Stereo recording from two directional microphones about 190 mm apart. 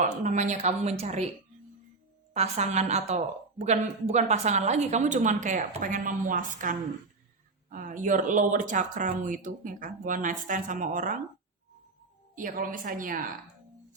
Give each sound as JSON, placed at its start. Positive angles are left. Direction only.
{"t": 0.0, "sound": "a woman's voice", "side_deg": -40}
{"t": 2.3, "sound": "a woman's voice", "side_deg": -35}
{"t": 12.4, "sound": "speech", "side_deg": -45}